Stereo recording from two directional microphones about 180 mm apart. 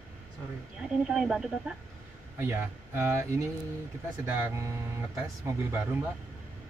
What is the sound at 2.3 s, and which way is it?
A man's voice, 15° right (ahead or behind).